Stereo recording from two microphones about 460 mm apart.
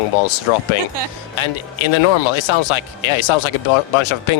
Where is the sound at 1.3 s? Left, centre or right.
Left.